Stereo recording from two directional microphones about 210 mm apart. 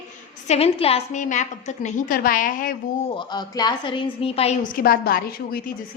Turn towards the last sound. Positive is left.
turn(degrees=45)  # may be behind; listen again after turning